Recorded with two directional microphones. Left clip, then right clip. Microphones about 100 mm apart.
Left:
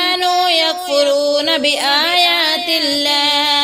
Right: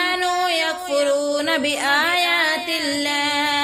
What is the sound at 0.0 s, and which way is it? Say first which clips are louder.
Music: left 6 dB; 25° left (ahead or behind).